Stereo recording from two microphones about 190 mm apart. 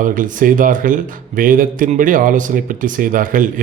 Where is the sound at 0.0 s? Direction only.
45° right (ahead or behind).